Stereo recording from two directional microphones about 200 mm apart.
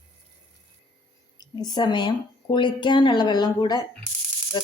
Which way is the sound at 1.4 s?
20° left (ahead or behind).